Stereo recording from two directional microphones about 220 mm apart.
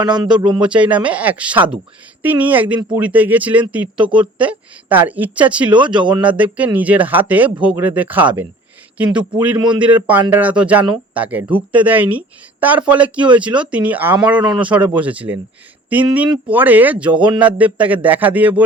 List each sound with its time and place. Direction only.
0.0 s speech: 20° right (ahead or behind)
0.6 s a woman's voice: 5° right (ahead or behind)
5.7 s speech: 20° right (ahead or behind)
6.1 s a woman's voice: 5° right (ahead or behind)
9.6 s speech: 20° right (ahead or behind)
9.8 s a woman's voice: 5° right (ahead or behind)
17.1 s speech: 20° right (ahead or behind)
17.4 s a woman's voice: 5° right (ahead or behind)